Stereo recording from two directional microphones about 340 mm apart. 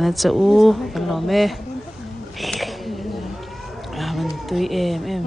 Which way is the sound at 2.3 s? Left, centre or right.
Centre.